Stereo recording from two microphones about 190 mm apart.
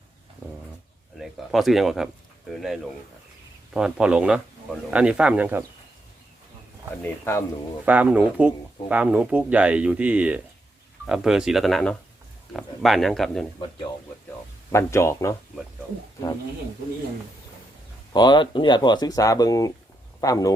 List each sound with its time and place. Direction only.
1.2 s speech: centre (ahead or behind)
3.8 s speech: 5° right (ahead or behind)
7.0 s speech: 15° left (ahead or behind)
7.9 s speech: 10° right (ahead or behind)
14.7 s speech: 15° left (ahead or behind)
18.1 s speech: 25° left (ahead or behind)